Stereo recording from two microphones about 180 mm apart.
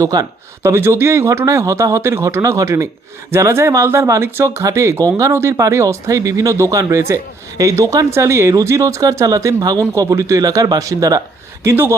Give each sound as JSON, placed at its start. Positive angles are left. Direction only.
{"t": 0.0, "sound": "speech", "side_deg": -20}